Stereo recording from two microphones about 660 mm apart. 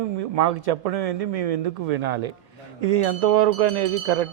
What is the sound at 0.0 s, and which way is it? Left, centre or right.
A man's voice, right.